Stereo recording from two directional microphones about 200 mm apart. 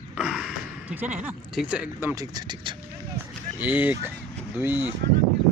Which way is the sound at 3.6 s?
10° right (ahead or behind).